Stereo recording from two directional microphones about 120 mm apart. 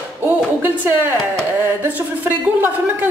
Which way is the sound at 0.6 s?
15° right (ahead or behind).